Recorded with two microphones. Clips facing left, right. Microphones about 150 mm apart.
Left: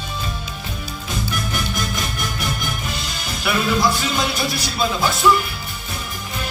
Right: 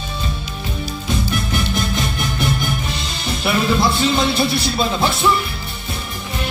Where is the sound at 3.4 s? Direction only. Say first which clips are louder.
Right 2 dB; 25° right (ahead or behind).